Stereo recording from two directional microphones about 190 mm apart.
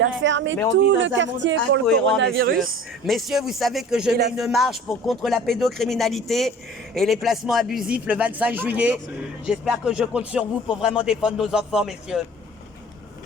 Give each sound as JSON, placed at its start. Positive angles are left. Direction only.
{"t": 0.0, "sound": "speech", "side_deg": -75}
{"t": 2.3, "sound": "speech", "side_deg": -55}
{"t": 3.1, "sound": "speech", "side_deg": 0}